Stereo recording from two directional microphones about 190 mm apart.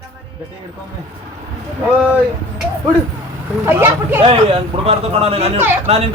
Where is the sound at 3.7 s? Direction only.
10° right (ahead or behind).